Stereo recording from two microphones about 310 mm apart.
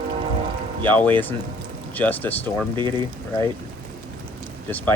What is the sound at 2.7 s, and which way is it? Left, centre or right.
Speech, centre.